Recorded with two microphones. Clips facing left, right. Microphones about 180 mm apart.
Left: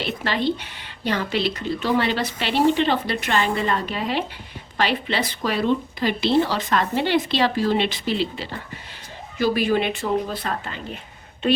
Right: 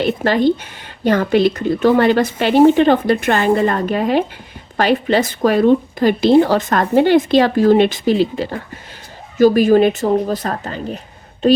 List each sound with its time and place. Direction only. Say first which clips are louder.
0.0 s a woman's voice: right 9 dB; 45° right (ahead or behind)